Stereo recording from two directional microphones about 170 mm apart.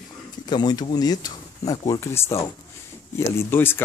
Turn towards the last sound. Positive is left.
turn(degrees=15)  # may be behind; listen again after turning